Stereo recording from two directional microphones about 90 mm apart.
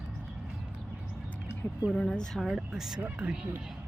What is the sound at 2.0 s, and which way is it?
Speech, 10° left (ahead or behind).